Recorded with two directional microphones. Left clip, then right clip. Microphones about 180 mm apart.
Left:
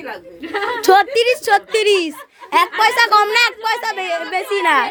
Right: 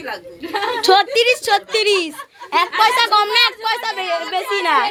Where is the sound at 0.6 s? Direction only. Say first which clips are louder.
Left 1 dB; 30° left (ahead or behind).